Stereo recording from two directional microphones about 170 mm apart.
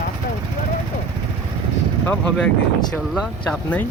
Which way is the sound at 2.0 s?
10° left (ahead or behind).